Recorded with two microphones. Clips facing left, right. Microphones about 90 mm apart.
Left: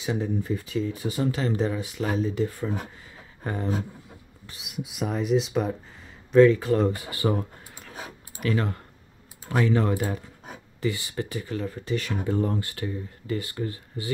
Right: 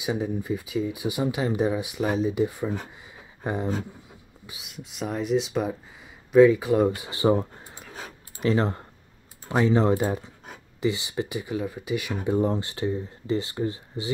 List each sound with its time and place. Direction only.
0.0 s speech: 10° right (ahead or behind)
4.5 s speech: centre (ahead or behind)
7.0 s speech: 20° right (ahead or behind)